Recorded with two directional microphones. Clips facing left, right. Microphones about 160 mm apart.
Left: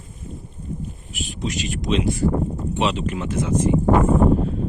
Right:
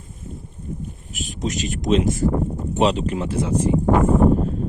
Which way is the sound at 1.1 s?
45° right (ahead or behind).